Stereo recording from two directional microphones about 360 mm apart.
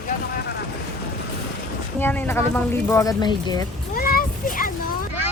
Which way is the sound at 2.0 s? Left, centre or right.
Centre.